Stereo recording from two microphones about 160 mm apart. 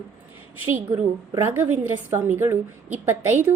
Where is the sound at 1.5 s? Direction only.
10° right (ahead or behind).